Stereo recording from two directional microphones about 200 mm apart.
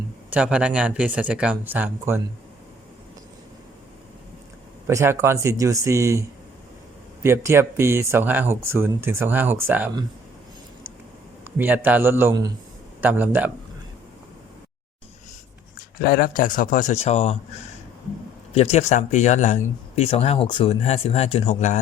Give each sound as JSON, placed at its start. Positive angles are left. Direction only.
{"t": 0.3, "sound": "speech", "side_deg": -5}
{"t": 4.9, "sound": "speech", "side_deg": -15}
{"t": 11.5, "sound": "speech", "side_deg": -10}
{"t": 16.0, "sound": "speech", "side_deg": 45}
{"t": 18.5, "sound": "speech", "side_deg": 30}